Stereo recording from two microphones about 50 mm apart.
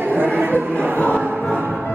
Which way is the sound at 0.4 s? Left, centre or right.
Right.